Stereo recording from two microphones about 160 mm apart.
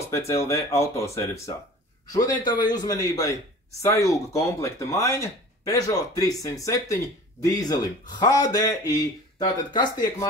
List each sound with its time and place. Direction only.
0.1 s speech: 15° left (ahead or behind)